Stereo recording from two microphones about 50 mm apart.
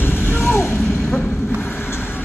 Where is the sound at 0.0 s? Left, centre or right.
Left.